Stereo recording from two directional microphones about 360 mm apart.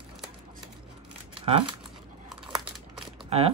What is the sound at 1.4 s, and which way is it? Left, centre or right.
Speech, centre.